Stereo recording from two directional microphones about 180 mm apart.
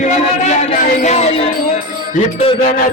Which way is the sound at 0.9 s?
40° left (ahead or behind).